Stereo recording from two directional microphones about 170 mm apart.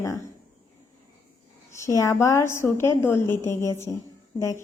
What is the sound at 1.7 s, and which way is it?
A woman's voice, 15° left (ahead or behind).